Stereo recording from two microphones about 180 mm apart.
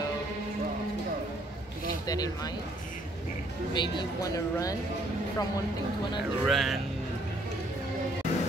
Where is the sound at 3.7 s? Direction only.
25° left (ahead or behind).